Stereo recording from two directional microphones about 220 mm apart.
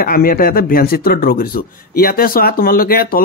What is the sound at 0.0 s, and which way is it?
Speech, 40° left (ahead or behind).